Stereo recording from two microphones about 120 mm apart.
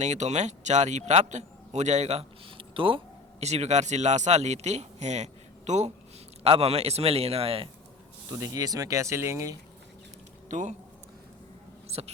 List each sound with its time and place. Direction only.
0.0 s a man's voice: 75° right (ahead or behind); by 3.0 s 45° right (ahead or behind)
3.4 s a man's voice: 65° right (ahead or behind)
6.4 s a man's voice: 60° right (ahead or behind)
8.3 s speech: 30° right (ahead or behind)
10.5 s a man's voice: 90° right
11.9 s mouse: 60° right (ahead or behind)